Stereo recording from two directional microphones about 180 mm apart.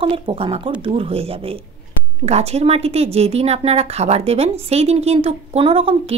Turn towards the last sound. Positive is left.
turn(degrees=-30)  # may be behind; listen again after turning